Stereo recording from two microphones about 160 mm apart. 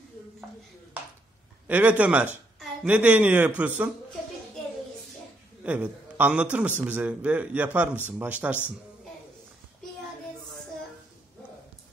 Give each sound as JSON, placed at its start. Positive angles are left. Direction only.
{"t": 1.7, "sound": "a man's voice", "side_deg": -10}
{"t": 5.6, "sound": "a man's voice", "side_deg": -10}